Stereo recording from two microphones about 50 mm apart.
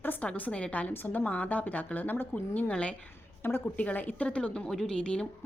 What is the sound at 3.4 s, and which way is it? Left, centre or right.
Speech, left.